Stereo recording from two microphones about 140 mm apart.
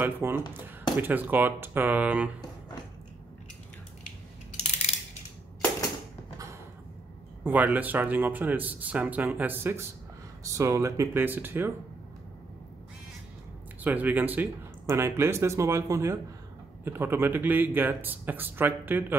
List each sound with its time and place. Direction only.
0.0 s speech: 15° right (ahead or behind)
7.4 s speech: 10° right (ahead or behind)
13.8 s speech: 10° right (ahead or behind)